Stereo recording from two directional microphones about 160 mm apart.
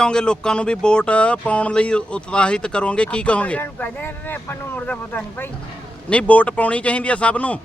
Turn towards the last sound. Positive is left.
turn(degrees=10)  # may be behind; listen again after turning